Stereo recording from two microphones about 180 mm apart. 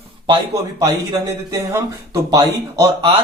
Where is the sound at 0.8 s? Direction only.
20° right (ahead or behind).